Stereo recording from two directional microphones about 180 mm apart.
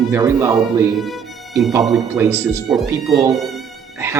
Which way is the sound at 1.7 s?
20° right (ahead or behind).